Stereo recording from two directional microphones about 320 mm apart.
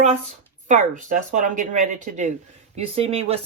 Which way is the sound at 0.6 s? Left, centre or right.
Right.